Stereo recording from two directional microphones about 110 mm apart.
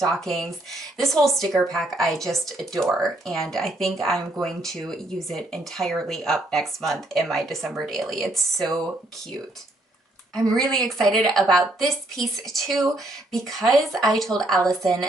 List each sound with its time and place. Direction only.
0.0 s speech: centre (ahead or behind)
10.3 s speech: 5° left (ahead or behind)
14.6 s a woman's voice: 30° right (ahead or behind)